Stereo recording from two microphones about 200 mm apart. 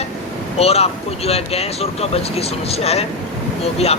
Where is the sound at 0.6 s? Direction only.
30° left (ahead or behind).